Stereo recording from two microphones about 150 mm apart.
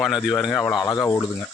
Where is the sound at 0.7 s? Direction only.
25° left (ahead or behind).